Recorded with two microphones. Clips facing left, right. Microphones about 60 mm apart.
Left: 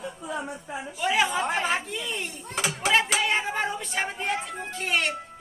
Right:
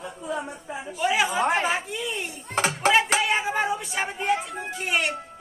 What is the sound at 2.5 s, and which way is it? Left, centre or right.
Speech, right.